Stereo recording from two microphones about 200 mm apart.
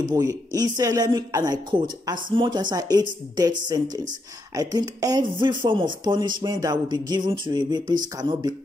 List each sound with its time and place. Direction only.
0.0 s speech: 15° right (ahead or behind)